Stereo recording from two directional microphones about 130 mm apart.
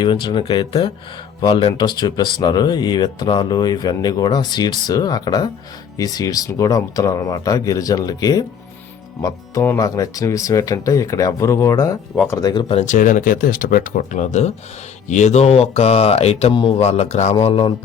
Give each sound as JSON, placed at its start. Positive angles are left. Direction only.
{"t": 0.0, "sound": "speech", "side_deg": 35}
{"t": 12.8, "sound": "speech", "side_deg": 80}
{"t": 17.4, "sound": "speech", "side_deg": 45}